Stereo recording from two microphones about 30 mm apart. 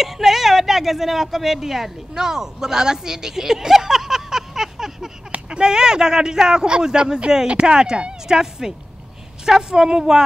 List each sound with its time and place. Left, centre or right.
0.0 s speech: centre
2.1 s speech: centre
5.6 s speech: right
7.4 s speech: right
7.7 s speech: right